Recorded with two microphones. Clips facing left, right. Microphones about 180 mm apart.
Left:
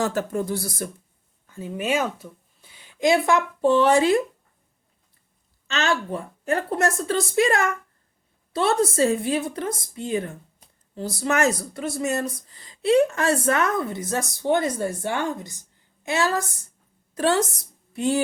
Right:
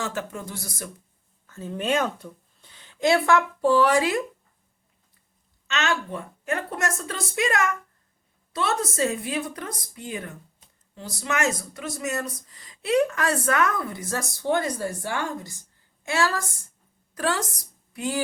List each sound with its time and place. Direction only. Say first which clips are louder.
0.0 s a woman's voice: left 7 dB; 40° left (ahead or behind)
1.5 s speech: even; 10° left (ahead or behind)
5.6 s a woman's voice: left 2 dB; 30° left (ahead or behind)
17.9 s music: left 6 dB; 25° left (ahead or behind)